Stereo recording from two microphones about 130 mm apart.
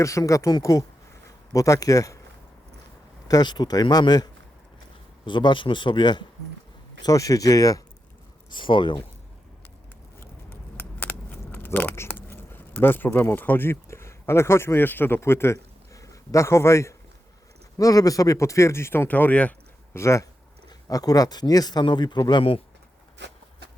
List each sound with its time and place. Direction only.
0.0 s speech: 25° left (ahead or behind)
3.2 s a man's voice: 30° left (ahead or behind)
8.4 s a man's voice: 40° left (ahead or behind)
10.2 s keys jangling: 15° left (ahead or behind)
17.7 s a man's voice: 25° left (ahead or behind)